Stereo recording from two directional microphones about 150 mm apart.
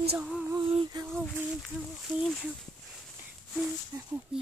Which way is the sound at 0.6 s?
35° right (ahead or behind).